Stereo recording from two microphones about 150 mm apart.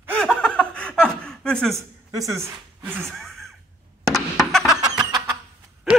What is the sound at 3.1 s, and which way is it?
Gasp, centre (ahead or behind).